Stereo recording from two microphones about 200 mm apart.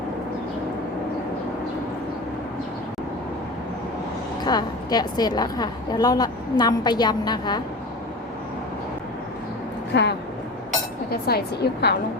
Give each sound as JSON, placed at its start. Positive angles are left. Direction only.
{"t": 4.4, "sound": "a woman's voice", "side_deg": 20}
{"t": 9.9, "sound": "a woman's voice", "side_deg": 60}